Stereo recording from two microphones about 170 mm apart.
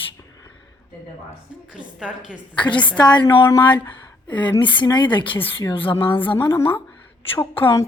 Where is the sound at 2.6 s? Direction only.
30° left (ahead or behind).